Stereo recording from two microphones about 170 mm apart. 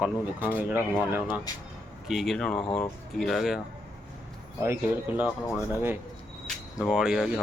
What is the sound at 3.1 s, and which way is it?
Speech, centre (ahead or behind).